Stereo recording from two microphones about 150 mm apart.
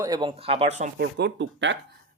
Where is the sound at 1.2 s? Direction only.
90° right.